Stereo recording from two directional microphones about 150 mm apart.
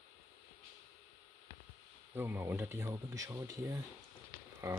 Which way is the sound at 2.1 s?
15° right (ahead or behind).